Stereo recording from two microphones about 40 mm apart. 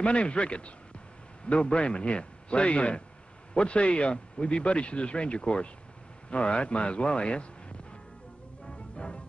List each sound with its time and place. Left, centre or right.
0.0 s speech: left
8.6 s music: left